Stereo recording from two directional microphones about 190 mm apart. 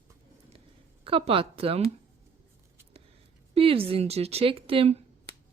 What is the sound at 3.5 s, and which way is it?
A woman's voice, 30° right (ahead or behind).